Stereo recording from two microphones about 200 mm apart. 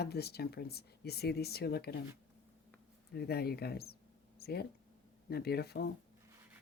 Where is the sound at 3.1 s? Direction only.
55° left (ahead or behind).